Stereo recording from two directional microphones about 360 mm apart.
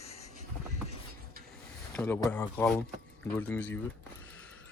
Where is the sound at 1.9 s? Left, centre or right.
Centre.